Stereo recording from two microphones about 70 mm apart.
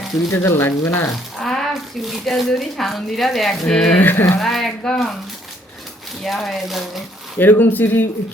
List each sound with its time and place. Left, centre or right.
0.3 s speech: left
1.1 s speech: centre
4.0 s speech: left
4.4 s speech: centre
6.2 s speech: centre
7.3 s speech: left